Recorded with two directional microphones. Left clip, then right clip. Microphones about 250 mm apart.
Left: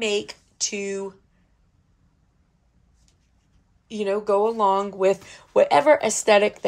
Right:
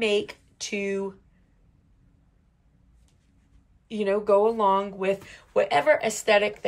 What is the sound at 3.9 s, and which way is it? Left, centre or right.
Speech, centre.